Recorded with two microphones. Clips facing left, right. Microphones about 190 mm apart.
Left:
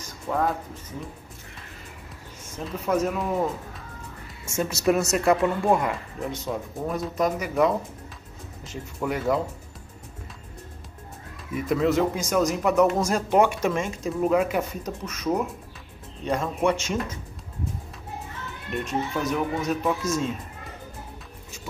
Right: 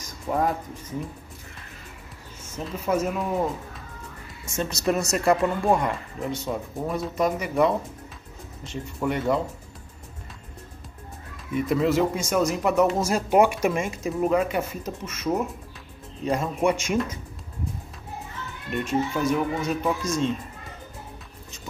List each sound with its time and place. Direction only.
0.3 s a man's voice: 10° right (ahead or behind)
2.5 s speech: centre (ahead or behind)
4.6 s speech: 5° left (ahead or behind)
11.5 s a man's voice: centre (ahead or behind)
18.7 s speech: centre (ahead or behind)